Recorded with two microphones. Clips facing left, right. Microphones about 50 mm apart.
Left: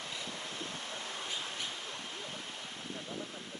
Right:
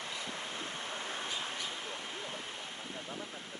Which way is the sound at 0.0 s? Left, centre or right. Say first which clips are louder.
Right 1 dB; right.